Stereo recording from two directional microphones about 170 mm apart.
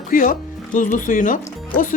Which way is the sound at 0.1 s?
50° left (ahead or behind).